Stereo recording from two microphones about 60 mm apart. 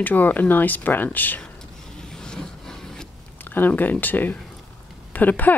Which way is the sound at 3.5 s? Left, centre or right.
Left.